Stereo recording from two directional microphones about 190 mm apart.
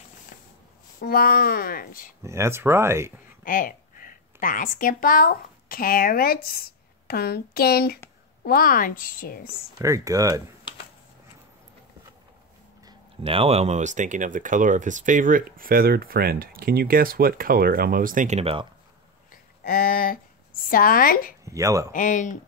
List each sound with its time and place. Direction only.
1.0 s speech: 50° left (ahead or behind)
2.2 s speech: 15° right (ahead or behind)
3.4 s a woman's voice: 45° left (ahead or behind)
9.8 s speech: 15° right (ahead or behind)
13.2 s speech: 30° right (ahead or behind)
19.6 s speech: 50° left (ahead or behind)
21.5 s speech: 15° right (ahead or behind)
21.9 s speech: 40° left (ahead or behind)